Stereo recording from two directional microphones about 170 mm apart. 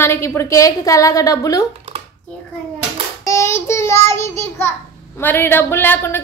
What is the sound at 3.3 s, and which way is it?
Child singing, 15° left (ahead or behind).